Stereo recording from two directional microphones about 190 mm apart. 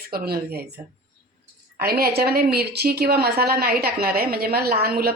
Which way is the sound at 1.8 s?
55° right (ahead or behind).